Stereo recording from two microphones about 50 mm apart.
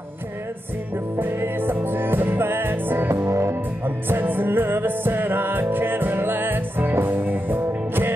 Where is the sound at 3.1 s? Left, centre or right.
Right.